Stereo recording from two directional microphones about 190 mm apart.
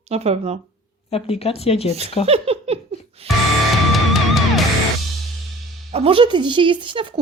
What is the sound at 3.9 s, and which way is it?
Music, centre (ahead or behind).